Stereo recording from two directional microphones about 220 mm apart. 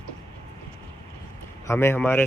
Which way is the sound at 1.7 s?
10° left (ahead or behind).